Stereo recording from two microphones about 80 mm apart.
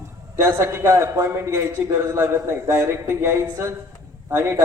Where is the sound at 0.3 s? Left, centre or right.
Right.